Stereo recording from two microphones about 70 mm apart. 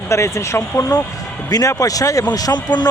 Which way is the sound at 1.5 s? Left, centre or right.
Left.